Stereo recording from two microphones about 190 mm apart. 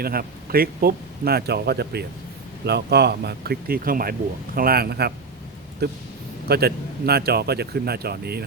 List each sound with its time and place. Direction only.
0.0 s speech: 50° right (ahead or behind)